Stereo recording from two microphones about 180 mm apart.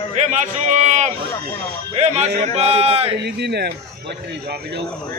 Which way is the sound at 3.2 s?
65° right (ahead or behind).